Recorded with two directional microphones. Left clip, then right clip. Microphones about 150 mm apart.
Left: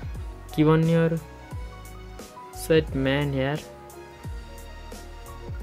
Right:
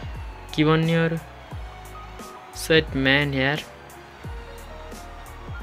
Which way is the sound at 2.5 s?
5° left (ahead or behind).